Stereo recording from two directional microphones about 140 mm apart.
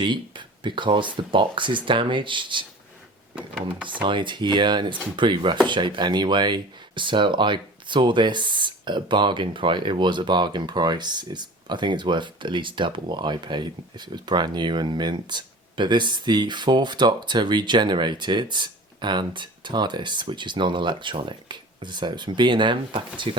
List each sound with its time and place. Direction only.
0.0 s speech: 35° right (ahead or behind)
3.3 s speech: 5° right (ahead or behind)
3.8 s speech: 35° right (ahead or behind)